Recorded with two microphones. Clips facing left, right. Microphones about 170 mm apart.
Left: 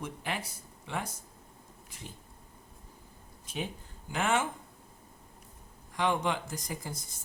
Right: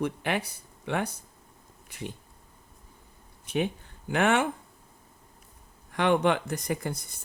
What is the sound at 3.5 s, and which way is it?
Speech, 65° right (ahead or behind).